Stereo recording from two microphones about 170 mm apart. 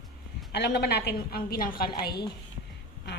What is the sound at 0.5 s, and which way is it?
A woman's voice, 75° left (ahead or behind).